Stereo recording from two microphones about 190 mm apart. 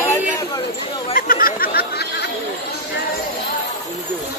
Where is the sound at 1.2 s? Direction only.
50° left (ahead or behind).